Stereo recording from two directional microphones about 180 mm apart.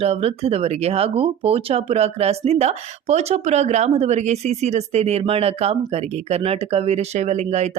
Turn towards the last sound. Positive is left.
turn(degrees=-40)  # may be behind; listen again after turning